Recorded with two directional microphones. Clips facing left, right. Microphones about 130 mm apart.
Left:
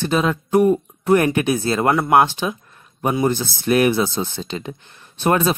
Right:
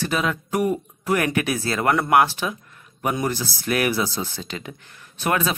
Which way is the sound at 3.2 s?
25° left (ahead or behind).